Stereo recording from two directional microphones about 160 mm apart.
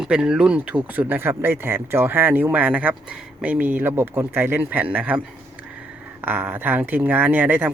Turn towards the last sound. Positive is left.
turn(degrees=-10)  # may be behind; listen again after turning